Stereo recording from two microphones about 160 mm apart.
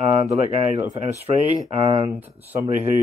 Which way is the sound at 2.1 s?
10° right (ahead or behind).